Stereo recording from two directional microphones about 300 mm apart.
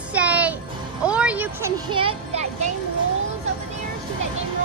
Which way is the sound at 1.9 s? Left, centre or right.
Centre.